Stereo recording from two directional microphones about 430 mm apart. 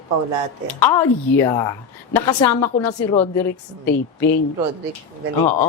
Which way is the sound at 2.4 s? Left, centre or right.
Left.